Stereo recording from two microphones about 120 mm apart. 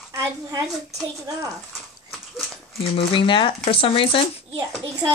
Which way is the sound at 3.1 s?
45° left (ahead or behind).